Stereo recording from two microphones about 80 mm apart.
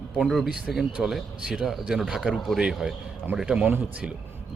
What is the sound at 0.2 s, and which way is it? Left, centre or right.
Speech, centre.